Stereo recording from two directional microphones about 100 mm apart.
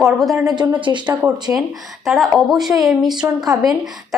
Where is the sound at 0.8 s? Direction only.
55° right (ahead or behind).